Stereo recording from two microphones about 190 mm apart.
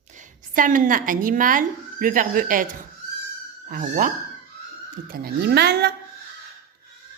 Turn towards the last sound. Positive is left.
turn(degrees=-60)  # may be behind; listen again after turning